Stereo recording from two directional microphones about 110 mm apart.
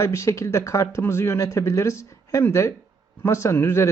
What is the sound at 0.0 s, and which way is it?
Speech, 25° left (ahead or behind).